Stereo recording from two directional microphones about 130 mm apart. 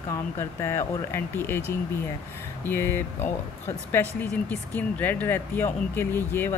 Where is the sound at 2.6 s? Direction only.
15° left (ahead or behind).